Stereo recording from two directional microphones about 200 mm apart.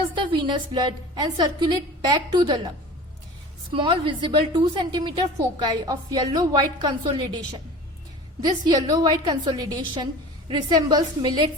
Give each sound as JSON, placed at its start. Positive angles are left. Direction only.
{"t": 0.2, "sound": "a woman's voice", "side_deg": -20}
{"t": 8.4, "sound": "a woman's voice", "side_deg": -20}